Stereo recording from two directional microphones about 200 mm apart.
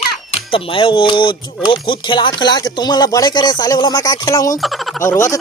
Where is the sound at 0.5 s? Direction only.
25° left (ahead or behind).